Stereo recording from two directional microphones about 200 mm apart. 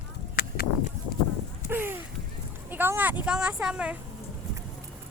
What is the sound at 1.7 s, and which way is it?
A woman's voice, 10° right (ahead or behind).